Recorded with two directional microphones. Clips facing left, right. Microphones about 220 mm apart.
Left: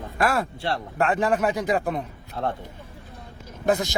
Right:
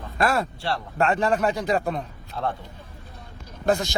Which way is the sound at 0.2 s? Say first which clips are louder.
Even; 15° left (ahead or behind).